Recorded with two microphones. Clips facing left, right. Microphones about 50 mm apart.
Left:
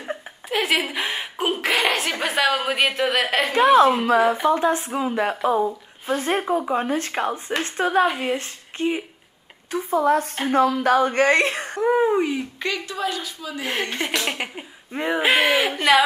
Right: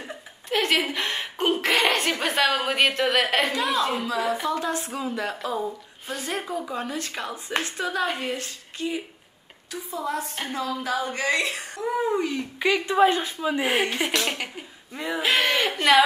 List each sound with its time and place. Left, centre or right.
0.5 s a woman's voice: centre
3.9 s speech: left
4.5 s speech: left
6.1 s speech: left
8.2 s speech: left
8.7 s speech: left; by 12.4 s centre
12.5 s speech: centre
12.8 s speech: right
13.7 s speech: centre
14.2 s speech: centre
14.9 s speech: left
15.2 s speech: centre